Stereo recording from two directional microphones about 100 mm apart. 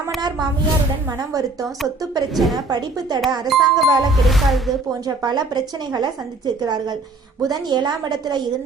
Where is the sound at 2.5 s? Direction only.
45° right (ahead or behind).